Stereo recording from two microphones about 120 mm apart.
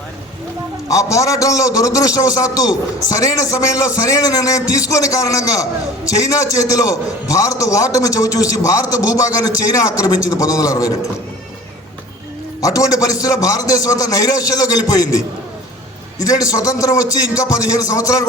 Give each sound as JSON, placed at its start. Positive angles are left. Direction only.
{"t": 0.9, "sound": "a man's voice", "side_deg": 25}
{"t": 12.6, "sound": "a man's voice", "side_deg": 30}
{"t": 16.5, "sound": "a man's voice", "side_deg": 30}